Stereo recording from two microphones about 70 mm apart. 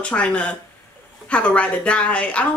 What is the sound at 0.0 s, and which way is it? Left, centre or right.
Speech, centre.